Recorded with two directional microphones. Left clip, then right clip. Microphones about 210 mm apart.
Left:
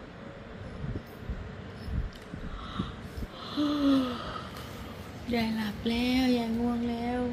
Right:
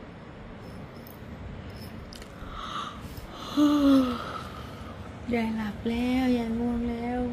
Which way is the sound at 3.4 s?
25° right (ahead or behind).